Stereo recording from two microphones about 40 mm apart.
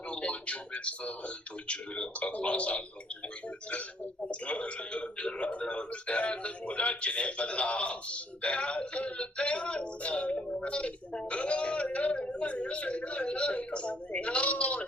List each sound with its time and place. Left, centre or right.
0.1 s a sound: left
1.6 s speech: left
4.3 s speech: left